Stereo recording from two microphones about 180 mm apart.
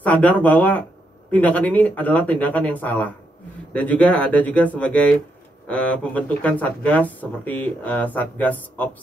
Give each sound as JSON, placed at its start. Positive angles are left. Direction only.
{"t": 0.0, "sound": "speech", "side_deg": 10}